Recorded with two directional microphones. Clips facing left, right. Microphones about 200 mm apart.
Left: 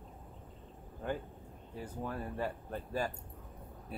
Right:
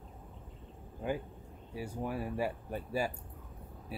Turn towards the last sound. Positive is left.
turn(degrees=-10)  # may be behind; listen again after turning